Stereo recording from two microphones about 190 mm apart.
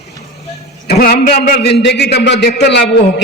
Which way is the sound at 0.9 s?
50° left (ahead or behind).